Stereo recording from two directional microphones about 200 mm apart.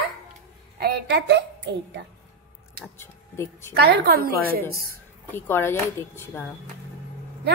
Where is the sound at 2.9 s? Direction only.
10° left (ahead or behind).